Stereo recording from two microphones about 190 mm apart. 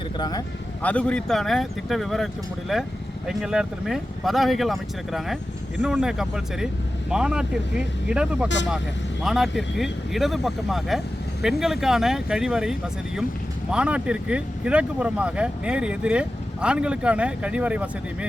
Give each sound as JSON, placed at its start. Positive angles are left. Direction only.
{"t": 0.2, "sound": "speech", "side_deg": 20}
{"t": 0.8, "sound": "speech", "side_deg": 5}